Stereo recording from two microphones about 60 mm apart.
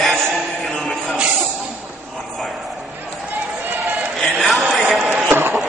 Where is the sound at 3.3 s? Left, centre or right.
Right.